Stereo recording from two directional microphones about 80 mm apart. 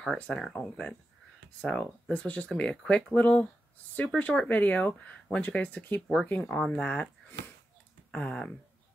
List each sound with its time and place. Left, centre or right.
0.1 s speech: centre
1.6 s speech: centre
6.5 s speech: centre